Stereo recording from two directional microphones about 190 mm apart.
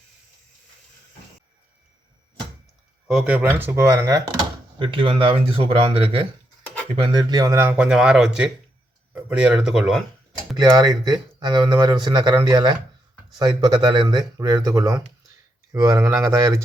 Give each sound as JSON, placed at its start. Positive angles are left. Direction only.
{"t": 3.1, "sound": "speech", "side_deg": -5}
{"t": 4.8, "sound": "speech", "side_deg": -25}
{"t": 10.6, "sound": "speech", "side_deg": -20}